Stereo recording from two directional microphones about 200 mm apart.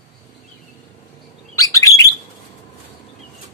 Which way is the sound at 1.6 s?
15° left (ahead or behind).